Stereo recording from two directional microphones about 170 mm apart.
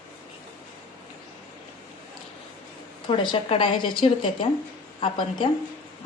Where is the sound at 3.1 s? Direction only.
30° left (ahead or behind).